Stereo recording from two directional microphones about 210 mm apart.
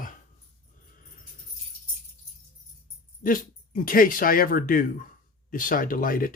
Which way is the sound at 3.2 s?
40° left (ahead or behind).